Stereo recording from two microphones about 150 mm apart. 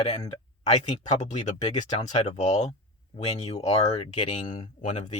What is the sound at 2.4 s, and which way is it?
Speech, 50° left (ahead or behind).